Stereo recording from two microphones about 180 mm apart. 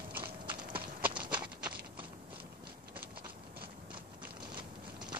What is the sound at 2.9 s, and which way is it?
Ratchet, 55° right (ahead or behind).